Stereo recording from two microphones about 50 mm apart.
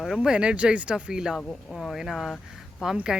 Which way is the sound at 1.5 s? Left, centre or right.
Centre.